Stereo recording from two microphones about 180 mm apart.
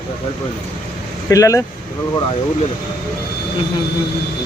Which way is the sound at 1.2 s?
20° left (ahead or behind).